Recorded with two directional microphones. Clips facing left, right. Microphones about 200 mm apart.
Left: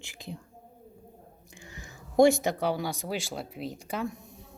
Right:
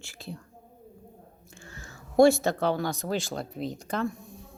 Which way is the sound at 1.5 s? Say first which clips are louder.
Right 1 dB; 15° left (ahead or behind).